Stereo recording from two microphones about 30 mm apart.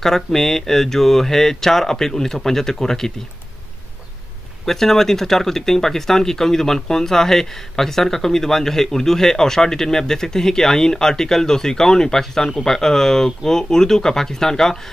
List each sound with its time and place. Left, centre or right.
0.0 s speech: centre
4.6 s speech: centre